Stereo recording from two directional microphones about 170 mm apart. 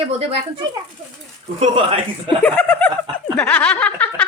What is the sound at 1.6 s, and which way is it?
Speech, 30° right (ahead or behind).